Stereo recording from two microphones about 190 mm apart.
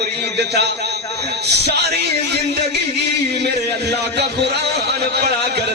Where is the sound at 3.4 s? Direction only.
60° right (ahead or behind).